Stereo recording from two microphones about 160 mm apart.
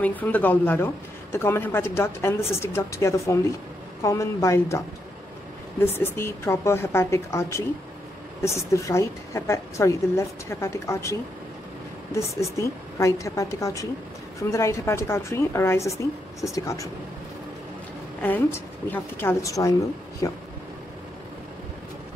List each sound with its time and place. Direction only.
0.0 s a woman's voice: 10° left (ahead or behind)
12.2 s a woman's voice: 20° left (ahead or behind)
18.2 s a woman's voice: 10° left (ahead or behind)